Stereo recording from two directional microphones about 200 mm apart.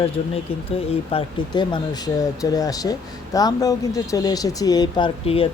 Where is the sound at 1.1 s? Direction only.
25° left (ahead or behind).